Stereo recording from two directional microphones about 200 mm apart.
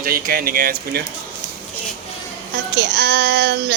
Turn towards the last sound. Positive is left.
turn(degrees=-55)  # may be behind; listen again after turning